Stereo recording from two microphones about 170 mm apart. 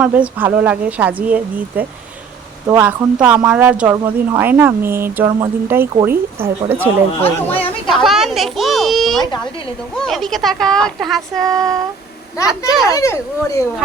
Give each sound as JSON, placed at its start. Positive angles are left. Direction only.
{"t": 0.0, "sound": "speech", "side_deg": -10}
{"t": 7.2, "sound": "speech", "side_deg": 10}
{"t": 7.9, "sound": "speech", "side_deg": 0}
{"t": 11.4, "sound": "a sound", "side_deg": -20}
{"t": 12.5, "sound": "speech", "side_deg": -5}
{"t": 12.9, "sound": "speech", "side_deg": 20}